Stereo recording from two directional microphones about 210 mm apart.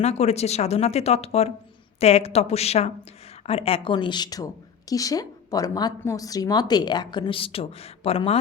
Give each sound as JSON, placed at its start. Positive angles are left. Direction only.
{"t": 0.0, "sound": "speech", "side_deg": 30}